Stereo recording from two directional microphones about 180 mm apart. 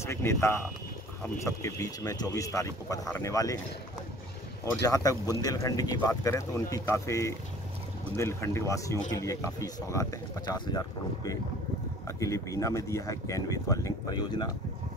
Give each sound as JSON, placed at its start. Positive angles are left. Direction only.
{"t": 0.0, "sound": "speech", "side_deg": 15}
{"t": 4.8, "sound": "speech", "side_deg": 20}
{"t": 12.1, "sound": "speech", "side_deg": 15}